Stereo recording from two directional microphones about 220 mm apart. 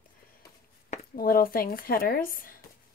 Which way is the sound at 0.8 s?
40° left (ahead or behind).